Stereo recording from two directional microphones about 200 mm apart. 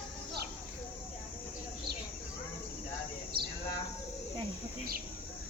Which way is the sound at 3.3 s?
50° right (ahead or behind).